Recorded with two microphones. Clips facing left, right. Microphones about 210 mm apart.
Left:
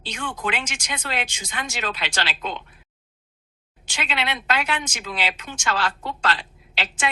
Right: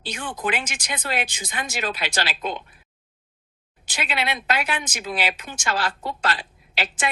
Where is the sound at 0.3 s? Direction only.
35° right (ahead or behind).